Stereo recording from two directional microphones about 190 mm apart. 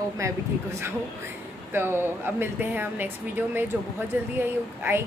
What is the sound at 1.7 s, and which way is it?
Speech, 10° right (ahead or behind).